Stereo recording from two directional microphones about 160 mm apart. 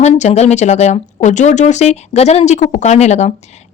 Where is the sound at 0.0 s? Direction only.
45° left (ahead or behind).